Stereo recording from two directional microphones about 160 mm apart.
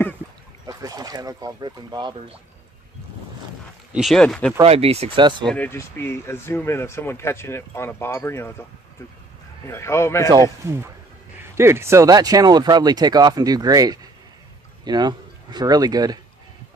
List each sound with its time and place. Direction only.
0.7 s speech: 25° right (ahead or behind)
3.9 s speech: centre (ahead or behind)
4.6 s speech: 40° right (ahead or behind)
5.5 s speech: 10° left (ahead or behind)
9.7 s speech: 15° left (ahead or behind)
10.6 s speech: 15° right (ahead or behind)